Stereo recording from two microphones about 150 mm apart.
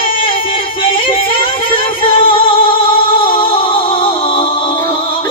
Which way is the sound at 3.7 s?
35° left (ahead or behind).